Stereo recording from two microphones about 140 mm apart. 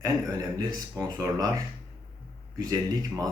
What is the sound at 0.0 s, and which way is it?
Speech, 25° right (ahead or behind).